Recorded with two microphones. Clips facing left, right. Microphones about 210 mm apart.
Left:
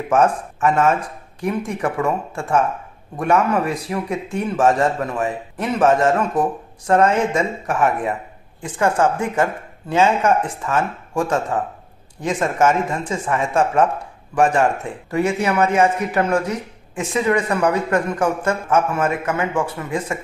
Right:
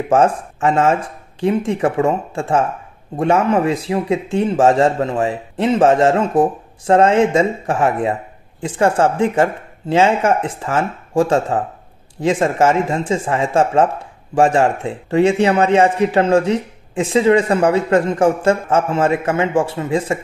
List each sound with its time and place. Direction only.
0.1 s a man's voice: 30° right (ahead or behind)